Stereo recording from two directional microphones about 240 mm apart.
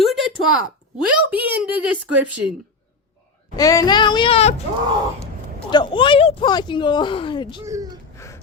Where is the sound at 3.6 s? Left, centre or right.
Centre.